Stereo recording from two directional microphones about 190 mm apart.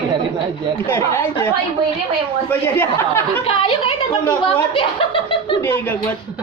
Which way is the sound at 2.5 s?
10° left (ahead or behind).